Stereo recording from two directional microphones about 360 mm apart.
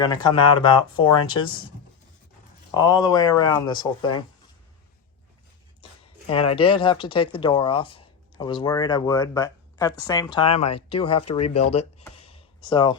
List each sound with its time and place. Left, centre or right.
0.0 s speech: centre
2.7 s speech: centre
6.2 s speech: centre
11.7 s a sound: centre